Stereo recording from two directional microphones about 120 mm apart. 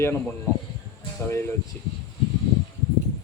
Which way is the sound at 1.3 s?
20° left (ahead or behind).